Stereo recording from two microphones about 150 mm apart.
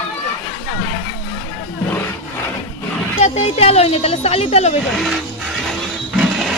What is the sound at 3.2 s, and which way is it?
A woman's voice, 45° left (ahead or behind).